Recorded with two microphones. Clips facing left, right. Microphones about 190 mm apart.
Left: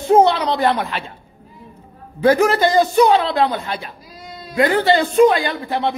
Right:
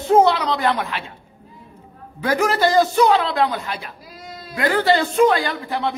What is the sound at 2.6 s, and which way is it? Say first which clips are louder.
A man's voice: left 2 dB; 20° left (ahead or behind).